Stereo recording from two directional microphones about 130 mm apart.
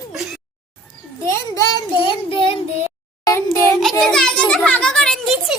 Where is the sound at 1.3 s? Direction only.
25° left (ahead or behind); by 2.6 s 45° left (ahead or behind).